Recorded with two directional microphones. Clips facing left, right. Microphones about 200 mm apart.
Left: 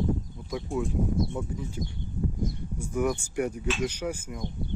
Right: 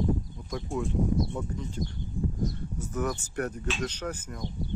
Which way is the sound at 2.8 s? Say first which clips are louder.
Left 4 dB; 10° left (ahead or behind).